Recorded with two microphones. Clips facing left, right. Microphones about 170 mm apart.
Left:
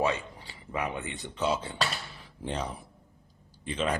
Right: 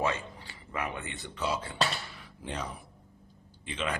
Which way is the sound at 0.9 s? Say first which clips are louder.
Left 4 dB; 15° left (ahead or behind).